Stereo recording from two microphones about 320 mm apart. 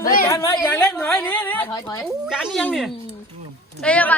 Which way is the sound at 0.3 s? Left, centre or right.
Centre.